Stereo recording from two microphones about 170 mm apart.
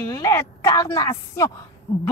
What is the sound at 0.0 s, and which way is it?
A woman's voice, 20° left (ahead or behind).